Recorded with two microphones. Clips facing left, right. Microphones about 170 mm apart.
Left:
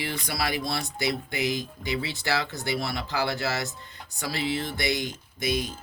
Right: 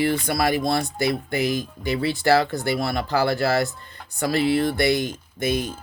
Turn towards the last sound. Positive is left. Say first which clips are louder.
# right 4 dB
turn(degrees=-50)  # may be behind; listen again after turning